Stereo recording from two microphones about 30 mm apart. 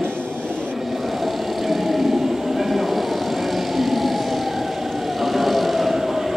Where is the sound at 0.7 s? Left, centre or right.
Centre.